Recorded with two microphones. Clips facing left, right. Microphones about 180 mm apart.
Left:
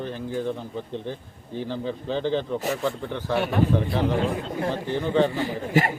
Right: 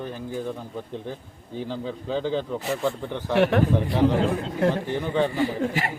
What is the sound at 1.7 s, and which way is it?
A man's voice, 10° right (ahead or behind).